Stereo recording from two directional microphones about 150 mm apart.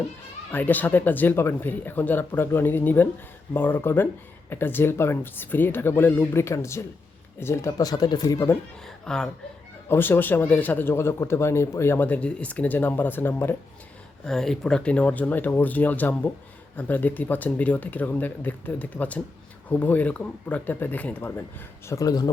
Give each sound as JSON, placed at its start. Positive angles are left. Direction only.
{"t": 0.5, "sound": "speech", "side_deg": 10}
{"t": 9.0, "sound": "speech", "side_deg": 5}
{"t": 14.3, "sound": "speech", "side_deg": 5}